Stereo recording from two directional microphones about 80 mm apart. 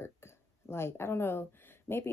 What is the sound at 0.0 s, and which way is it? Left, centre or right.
Speech, left.